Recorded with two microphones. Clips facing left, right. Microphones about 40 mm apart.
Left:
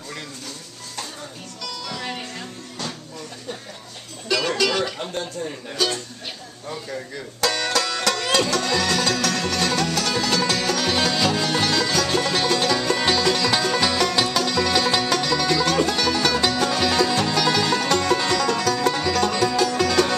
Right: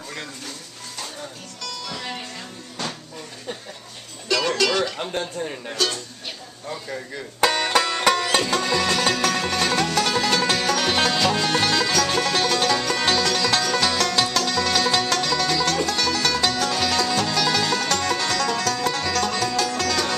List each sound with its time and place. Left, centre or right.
1.6 s music: centre
4.3 s music: centre
4.9 s speech: centre
7.3 s music: right; by 20.2 s centre